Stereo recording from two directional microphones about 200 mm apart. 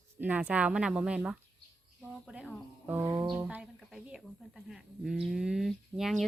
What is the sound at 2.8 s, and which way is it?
Music, 10° right (ahead or behind).